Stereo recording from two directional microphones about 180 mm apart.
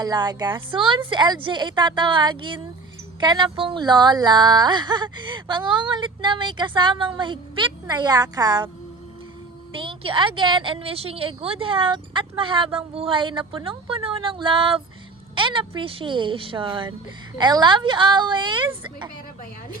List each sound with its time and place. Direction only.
0.0 s speech: 25° right (ahead or behind)
9.7 s speech: 30° right (ahead or behind)